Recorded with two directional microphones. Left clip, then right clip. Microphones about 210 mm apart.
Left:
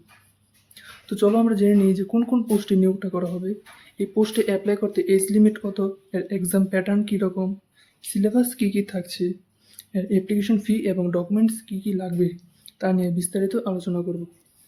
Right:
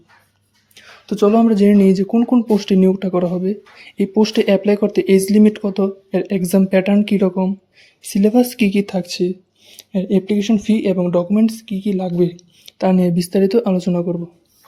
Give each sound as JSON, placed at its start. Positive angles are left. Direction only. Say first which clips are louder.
{"t": 0.7, "sound": "speech", "louder": "right 7 dB", "side_deg": -15}